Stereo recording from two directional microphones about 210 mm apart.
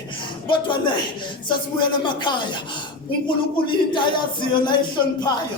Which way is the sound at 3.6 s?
25° left (ahead or behind).